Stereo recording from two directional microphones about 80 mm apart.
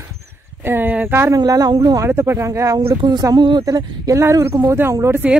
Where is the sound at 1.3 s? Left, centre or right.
Right.